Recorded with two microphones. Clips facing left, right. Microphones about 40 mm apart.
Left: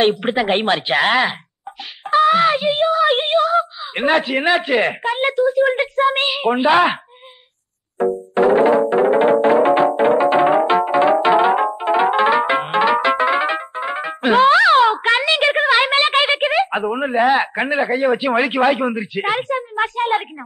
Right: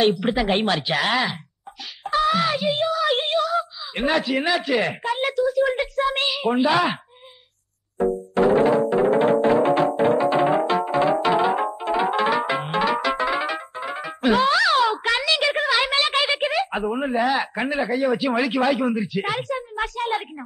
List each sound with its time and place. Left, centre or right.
0.0 s a woman's voice: left
8.4 s music: left